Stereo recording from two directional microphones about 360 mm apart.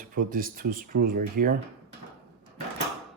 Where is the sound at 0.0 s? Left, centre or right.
Right.